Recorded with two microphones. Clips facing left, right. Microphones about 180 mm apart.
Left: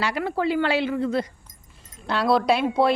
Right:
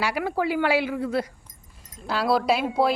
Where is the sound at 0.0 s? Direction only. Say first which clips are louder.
Left 1 dB; 10° right (ahead or behind).